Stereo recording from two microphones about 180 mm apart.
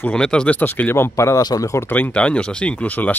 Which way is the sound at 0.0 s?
5° left (ahead or behind).